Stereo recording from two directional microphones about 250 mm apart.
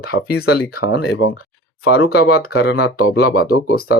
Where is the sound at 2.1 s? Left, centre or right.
Left.